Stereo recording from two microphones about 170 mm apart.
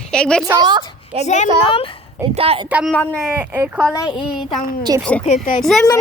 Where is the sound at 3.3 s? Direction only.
10° right (ahead or behind).